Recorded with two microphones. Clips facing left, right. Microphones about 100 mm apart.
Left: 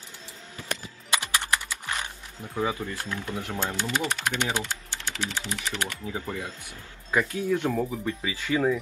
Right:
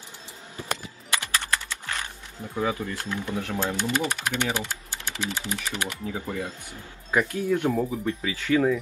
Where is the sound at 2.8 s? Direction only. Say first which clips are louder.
Right 2 dB; 15° right (ahead or behind).